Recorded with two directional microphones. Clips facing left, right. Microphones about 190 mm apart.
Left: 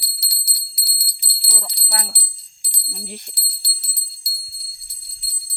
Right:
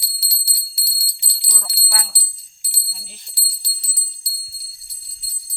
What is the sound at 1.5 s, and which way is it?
Bell, 10° left (ahead or behind).